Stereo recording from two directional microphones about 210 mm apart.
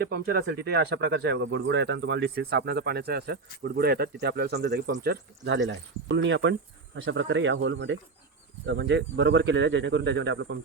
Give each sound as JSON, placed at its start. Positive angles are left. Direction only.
{"t": 0.0, "sound": "speech", "side_deg": -45}